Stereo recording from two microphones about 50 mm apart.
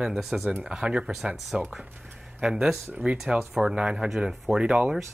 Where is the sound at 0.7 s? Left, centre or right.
Centre.